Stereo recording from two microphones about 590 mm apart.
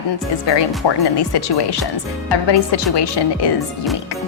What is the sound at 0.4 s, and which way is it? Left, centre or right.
A woman's voice, left.